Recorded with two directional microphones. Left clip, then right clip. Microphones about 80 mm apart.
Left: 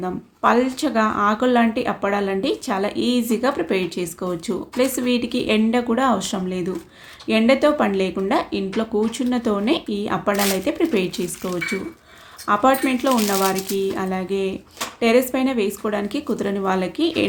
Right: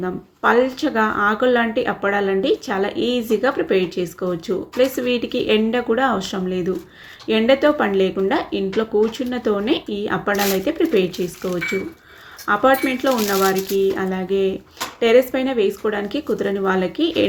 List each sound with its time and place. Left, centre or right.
0.0 s speech: left
12.5 s speech: left